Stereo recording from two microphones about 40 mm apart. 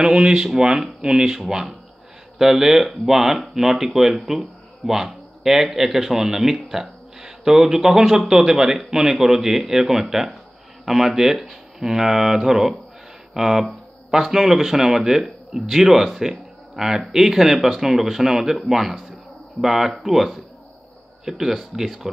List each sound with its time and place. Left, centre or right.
0.0 s speech: centre